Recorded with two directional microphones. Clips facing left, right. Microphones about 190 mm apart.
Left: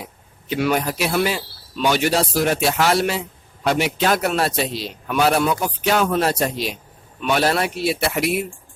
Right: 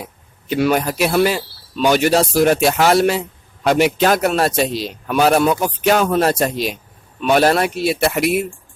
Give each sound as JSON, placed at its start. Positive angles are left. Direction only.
{"t": 0.5, "sound": "a man's voice", "side_deg": -45}